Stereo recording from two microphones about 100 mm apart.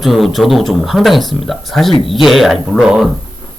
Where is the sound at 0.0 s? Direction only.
Centre (ahead or behind).